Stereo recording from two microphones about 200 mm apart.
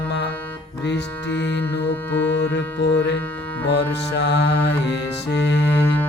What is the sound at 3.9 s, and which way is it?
Music, 60° left (ahead or behind).